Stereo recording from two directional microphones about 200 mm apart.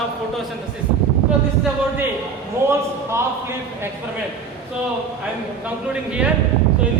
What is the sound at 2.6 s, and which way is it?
Speech, 15° right (ahead or behind).